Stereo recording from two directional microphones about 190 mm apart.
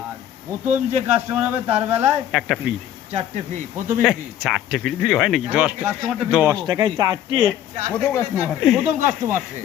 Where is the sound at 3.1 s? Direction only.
35° right (ahead or behind).